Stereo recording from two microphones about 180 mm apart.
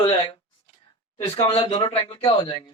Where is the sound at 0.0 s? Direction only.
30° left (ahead or behind).